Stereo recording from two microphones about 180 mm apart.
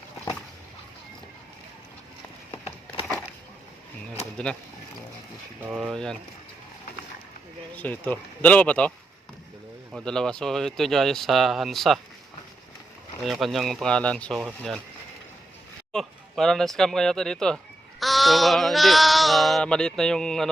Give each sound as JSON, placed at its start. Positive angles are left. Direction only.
{"t": 2.5, "sound": "a sound", "side_deg": 30}
{"t": 4.1, "sound": "a sound", "side_deg": 5}
{"t": 5.6, "sound": "speech", "side_deg": -5}
{"t": 5.9, "sound": "speech", "side_deg": 5}
{"t": 7.8, "sound": "speech", "side_deg": 10}
{"t": 9.9, "sound": "speech", "side_deg": 5}
{"t": 13.2, "sound": "speech", "side_deg": 0}
{"t": 15.9, "sound": "speech", "side_deg": 0}